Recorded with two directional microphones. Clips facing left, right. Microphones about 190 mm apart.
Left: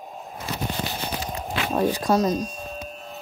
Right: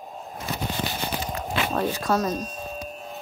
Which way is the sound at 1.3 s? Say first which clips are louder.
Left 1 dB; 15° left (ahead or behind).